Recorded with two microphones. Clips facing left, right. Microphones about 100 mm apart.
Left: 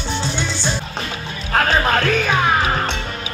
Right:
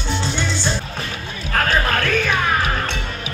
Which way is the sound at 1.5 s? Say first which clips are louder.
Left 3 dB; 20° left (ahead or behind).